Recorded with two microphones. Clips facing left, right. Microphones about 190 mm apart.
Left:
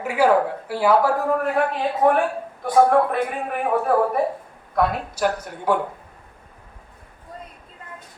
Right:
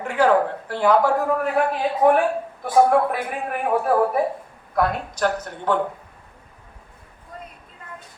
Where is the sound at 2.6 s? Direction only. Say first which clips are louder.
Left 1 dB; 5° right (ahead or behind).